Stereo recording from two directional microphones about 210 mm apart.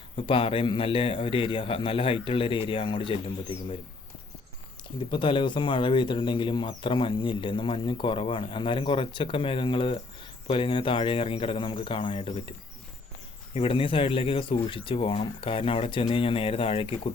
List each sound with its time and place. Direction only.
0.2 s speech: 25° left (ahead or behind)
5.1 s speech: 25° left (ahead or behind)